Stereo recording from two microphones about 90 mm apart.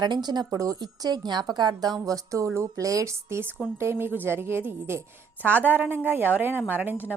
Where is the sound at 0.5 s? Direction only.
40° right (ahead or behind).